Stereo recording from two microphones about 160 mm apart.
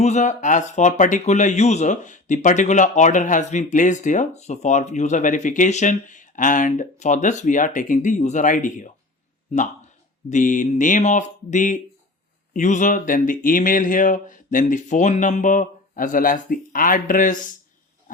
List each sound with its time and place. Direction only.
0.0 s speech: 45° left (ahead or behind)
10.2 s speech: 55° left (ahead or behind)